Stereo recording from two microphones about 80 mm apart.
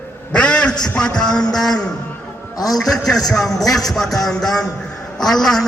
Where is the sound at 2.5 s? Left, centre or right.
Left.